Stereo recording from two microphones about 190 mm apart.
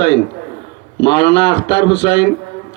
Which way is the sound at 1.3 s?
25° left (ahead or behind).